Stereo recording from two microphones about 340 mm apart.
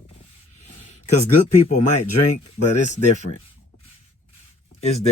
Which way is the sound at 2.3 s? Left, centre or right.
Left.